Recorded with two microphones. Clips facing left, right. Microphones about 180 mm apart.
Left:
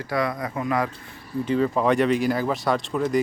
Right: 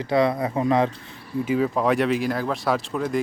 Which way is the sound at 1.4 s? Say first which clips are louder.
Even; 5° right (ahead or behind).